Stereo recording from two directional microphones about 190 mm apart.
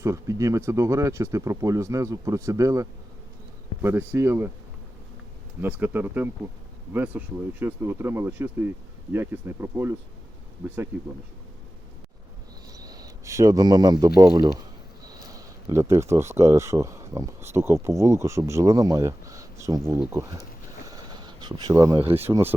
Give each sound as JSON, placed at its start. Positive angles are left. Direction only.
{"t": 0.0, "sound": "speech", "side_deg": -15}
{"t": 5.5, "sound": "speech", "side_deg": -10}
{"t": 10.9, "sound": "speech", "side_deg": -10}
{"t": 12.7, "sound": "a sound", "side_deg": -20}
{"t": 14.2, "sound": "speech", "side_deg": -20}
{"t": 20.9, "sound": "a sound", "side_deg": -20}
{"t": 22.1, "sound": "speech", "side_deg": -10}